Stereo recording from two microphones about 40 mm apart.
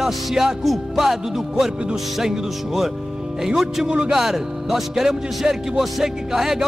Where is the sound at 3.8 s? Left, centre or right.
Right.